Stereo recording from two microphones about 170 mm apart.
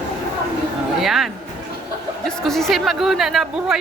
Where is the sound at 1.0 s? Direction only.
Centre (ahead or behind).